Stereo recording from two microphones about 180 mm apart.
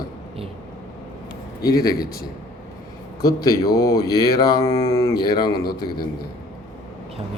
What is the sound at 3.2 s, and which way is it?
Speech, 20° left (ahead or behind).